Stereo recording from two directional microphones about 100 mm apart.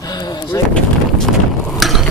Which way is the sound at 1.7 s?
Centre (ahead or behind).